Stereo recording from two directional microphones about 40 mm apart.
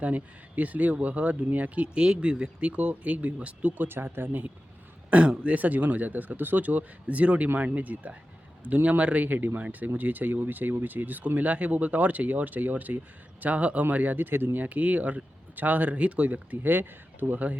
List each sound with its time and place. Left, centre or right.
0.0 s speech: right
2.0 s speech: right
3.8 s speech: right
5.4 s speech: right
9.2 s speech: right
14.6 s speech: right